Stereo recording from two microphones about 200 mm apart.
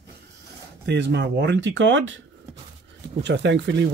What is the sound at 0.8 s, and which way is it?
Speech, 60° right (ahead or behind).